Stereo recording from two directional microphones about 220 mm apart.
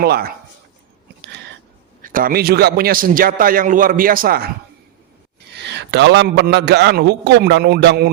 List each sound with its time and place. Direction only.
0.0 s a man's voice: 45° right (ahead or behind)
2.0 s a man's voice: 40° right (ahead or behind)
5.5 s a man's voice: 50° right (ahead or behind)